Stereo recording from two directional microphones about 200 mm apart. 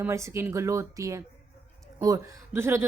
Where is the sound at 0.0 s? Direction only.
15° right (ahead or behind).